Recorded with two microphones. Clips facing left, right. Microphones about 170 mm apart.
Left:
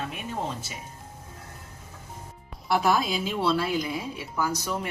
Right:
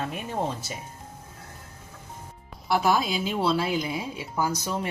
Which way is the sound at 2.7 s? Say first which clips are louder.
Even; centre (ahead or behind).